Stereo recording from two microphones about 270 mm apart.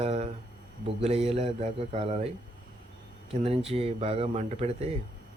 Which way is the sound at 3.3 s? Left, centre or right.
Right.